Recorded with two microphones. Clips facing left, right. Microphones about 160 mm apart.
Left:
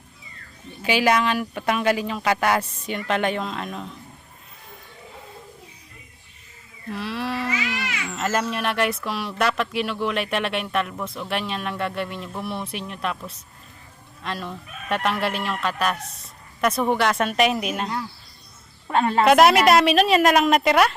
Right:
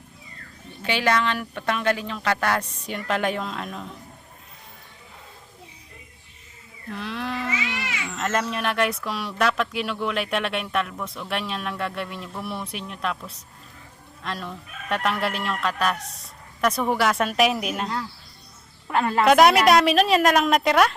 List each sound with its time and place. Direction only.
0.8 s speech: 10° left (ahead or behind)
6.9 s sheep: 5° left (ahead or behind)
7.8 s a sound: 25° right (ahead or behind)
8.1 s speech: 5° left (ahead or behind)
18.9 s a woman's voice: 25° left (ahead or behind)
19.2 s speech: centre (ahead or behind)